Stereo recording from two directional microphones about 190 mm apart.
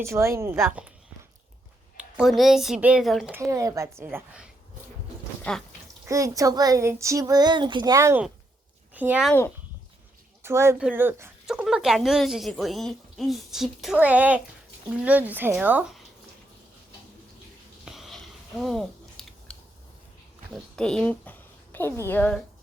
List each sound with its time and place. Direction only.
0.0 s speech: 15° right (ahead or behind)
2.0 s speech: 5° right (ahead or behind)
3.3 s speech: 15° right (ahead or behind)
5.4 s a sound: 5° left (ahead or behind)
6.1 s speech: 15° right (ahead or behind)
10.4 s speech: 15° right (ahead or behind)
17.8 s a sound: centre (ahead or behind)
18.6 s scissors: centre (ahead or behind)
20.5 s a sound: 5° left (ahead or behind)
22.0 s a woman's voice: 10° left (ahead or behind)